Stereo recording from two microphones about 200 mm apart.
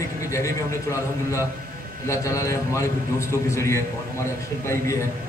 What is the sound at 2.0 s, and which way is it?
A man's voice, 15° left (ahead or behind).